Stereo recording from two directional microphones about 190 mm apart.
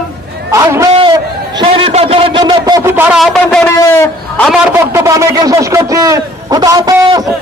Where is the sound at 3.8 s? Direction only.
15° left (ahead or behind).